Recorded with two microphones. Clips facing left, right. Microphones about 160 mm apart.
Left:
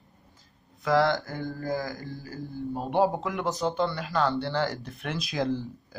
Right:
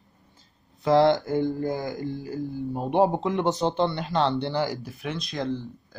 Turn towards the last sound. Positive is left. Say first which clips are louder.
# even
turn(degrees=5)  # may be behind; listen again after turning